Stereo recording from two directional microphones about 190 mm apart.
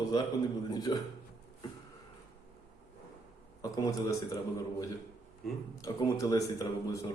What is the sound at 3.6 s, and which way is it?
Speech, 20° left (ahead or behind).